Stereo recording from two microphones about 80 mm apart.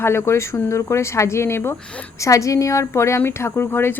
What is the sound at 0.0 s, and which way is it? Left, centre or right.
A woman's voice, left.